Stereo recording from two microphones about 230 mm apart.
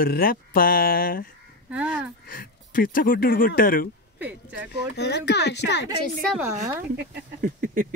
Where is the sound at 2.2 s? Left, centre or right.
Left.